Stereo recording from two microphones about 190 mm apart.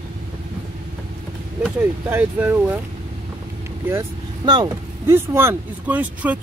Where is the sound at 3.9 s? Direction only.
20° right (ahead or behind).